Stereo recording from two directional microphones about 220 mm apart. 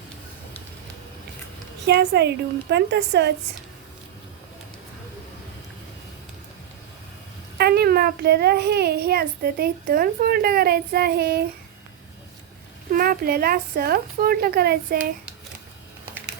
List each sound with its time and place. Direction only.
1.9 s a child's voice: 50° right (ahead or behind)
7.6 s a child's voice: 45° right (ahead or behind)
12.9 s a child's voice: 40° right (ahead or behind)